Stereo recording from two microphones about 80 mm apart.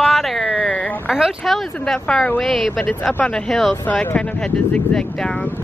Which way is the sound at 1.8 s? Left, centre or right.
Centre.